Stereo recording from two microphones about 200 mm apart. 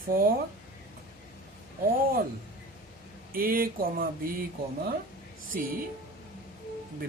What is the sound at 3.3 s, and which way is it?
Speech, 45° right (ahead or behind).